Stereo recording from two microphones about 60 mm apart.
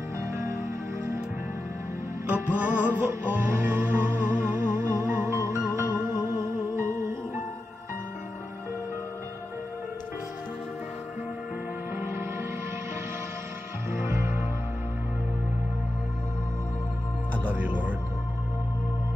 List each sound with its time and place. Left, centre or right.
0.2 s music: right
2.2 s music: right
12.0 s music: right
13.8 s music: right
17.5 s music: right